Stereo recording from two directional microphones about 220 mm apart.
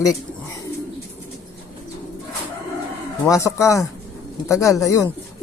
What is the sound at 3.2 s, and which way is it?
Speech, 15° left (ahead or behind).